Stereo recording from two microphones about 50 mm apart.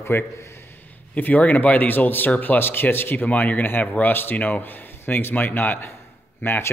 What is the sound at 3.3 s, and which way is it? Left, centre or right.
A man's voice, left.